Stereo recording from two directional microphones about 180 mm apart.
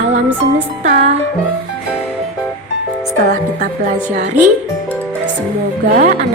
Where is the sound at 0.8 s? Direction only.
40° right (ahead or behind).